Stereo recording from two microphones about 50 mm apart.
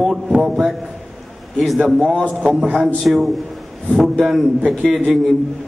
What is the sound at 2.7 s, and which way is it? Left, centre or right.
A man's voice, centre.